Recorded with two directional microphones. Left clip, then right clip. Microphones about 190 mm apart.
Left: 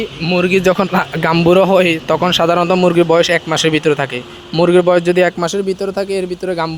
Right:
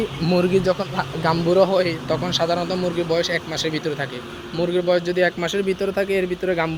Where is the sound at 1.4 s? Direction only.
60° left (ahead or behind).